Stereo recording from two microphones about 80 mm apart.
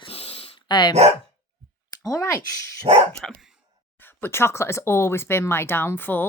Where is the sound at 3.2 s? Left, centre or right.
Centre.